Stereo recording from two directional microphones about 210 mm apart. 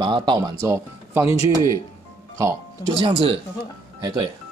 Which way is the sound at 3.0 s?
25° right (ahead or behind).